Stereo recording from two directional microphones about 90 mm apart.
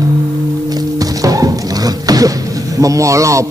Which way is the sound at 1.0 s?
40° right (ahead or behind).